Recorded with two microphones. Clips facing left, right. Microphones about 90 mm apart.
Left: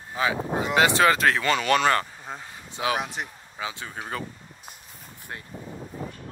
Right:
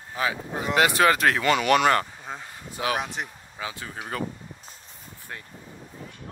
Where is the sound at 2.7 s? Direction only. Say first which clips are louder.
Left 1 dB; 25° left (ahead or behind).